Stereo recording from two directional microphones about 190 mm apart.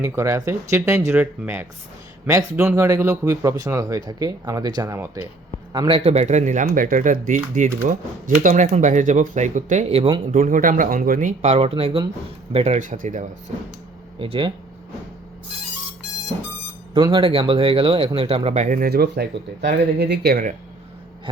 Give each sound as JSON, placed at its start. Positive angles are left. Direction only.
{"t": 0.0, "sound": "speech", "side_deg": -15}
{"t": 5.7, "sound": "speech", "side_deg": -25}
{"t": 14.2, "sound": "speech", "side_deg": -25}
{"t": 16.9, "sound": "speech", "side_deg": -25}